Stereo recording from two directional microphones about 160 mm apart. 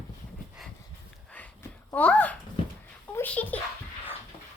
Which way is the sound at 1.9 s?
10° left (ahead or behind).